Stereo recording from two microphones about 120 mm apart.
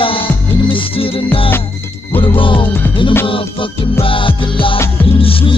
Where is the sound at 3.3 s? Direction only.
50° left (ahead or behind).